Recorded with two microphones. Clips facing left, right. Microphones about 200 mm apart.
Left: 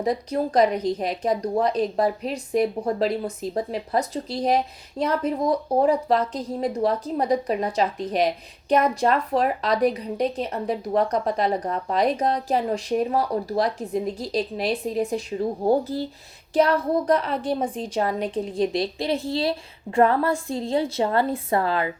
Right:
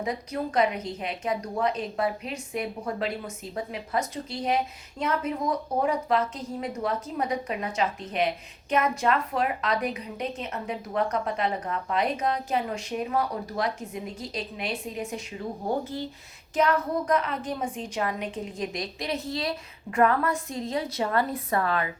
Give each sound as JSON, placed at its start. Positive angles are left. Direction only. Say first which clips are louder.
{"t": 0.0, "sound": "a woman's voice", "louder": "left 6 dB", "side_deg": 35}